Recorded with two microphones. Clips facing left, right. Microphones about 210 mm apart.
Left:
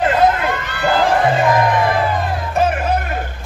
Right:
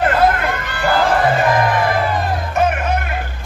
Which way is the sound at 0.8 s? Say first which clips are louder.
Even; 20° left (ahead or behind).